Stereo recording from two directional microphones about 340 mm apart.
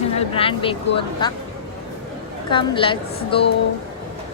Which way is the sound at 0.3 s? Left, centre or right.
Centre.